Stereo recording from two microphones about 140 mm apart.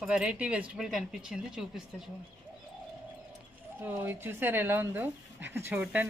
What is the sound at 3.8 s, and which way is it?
Speech, 15° right (ahead or behind).